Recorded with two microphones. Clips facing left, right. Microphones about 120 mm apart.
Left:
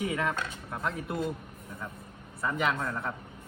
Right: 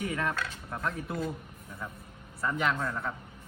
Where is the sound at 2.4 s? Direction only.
Centre (ahead or behind).